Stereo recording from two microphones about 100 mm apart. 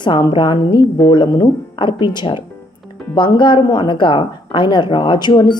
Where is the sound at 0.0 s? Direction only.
50° left (ahead or behind).